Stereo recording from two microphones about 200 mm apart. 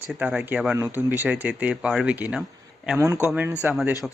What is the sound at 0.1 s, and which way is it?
Speech, 5° right (ahead or behind).